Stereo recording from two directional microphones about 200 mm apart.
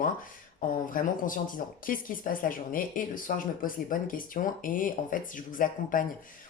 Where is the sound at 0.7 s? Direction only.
40° left (ahead or behind).